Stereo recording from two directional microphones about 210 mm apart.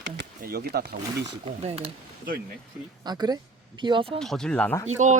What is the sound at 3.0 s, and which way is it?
Speech, 20° right (ahead or behind).